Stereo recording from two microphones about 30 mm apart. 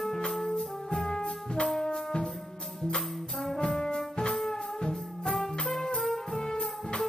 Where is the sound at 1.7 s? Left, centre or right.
Left.